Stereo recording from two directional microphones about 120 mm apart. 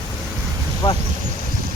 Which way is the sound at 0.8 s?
50° left (ahead or behind).